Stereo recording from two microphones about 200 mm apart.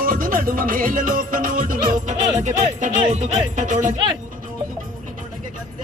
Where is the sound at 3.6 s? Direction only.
40° right (ahead or behind).